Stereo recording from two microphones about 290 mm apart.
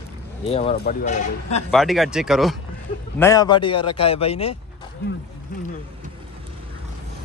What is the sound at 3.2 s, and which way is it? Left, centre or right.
A man's voice, centre.